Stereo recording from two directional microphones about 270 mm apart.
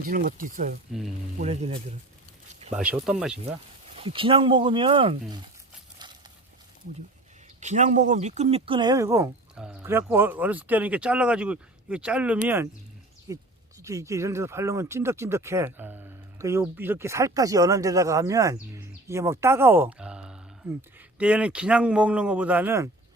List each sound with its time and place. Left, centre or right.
0.0 s speech: right
2.7 s speech: centre
3.9 s speech: centre
6.0 s a sound: centre
7.6 s speech: right; by 22.9 s centre